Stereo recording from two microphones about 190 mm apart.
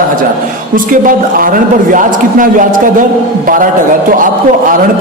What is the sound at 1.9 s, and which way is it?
A man's voice, 45° right (ahead or behind).